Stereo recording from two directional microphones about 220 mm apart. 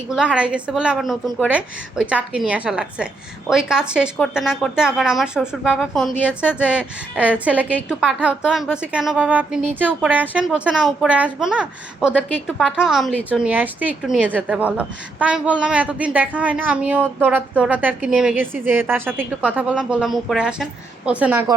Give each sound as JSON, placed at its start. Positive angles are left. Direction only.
{"t": 0.1, "sound": "a child's voice", "side_deg": -5}